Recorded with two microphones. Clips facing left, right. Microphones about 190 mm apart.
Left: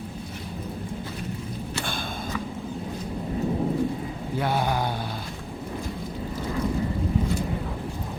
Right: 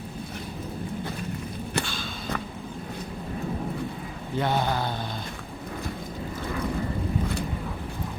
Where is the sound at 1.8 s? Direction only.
55° left (ahead or behind).